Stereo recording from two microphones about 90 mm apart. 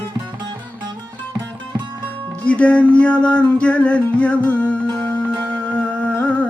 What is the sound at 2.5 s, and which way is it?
Music, 15° left (ahead or behind).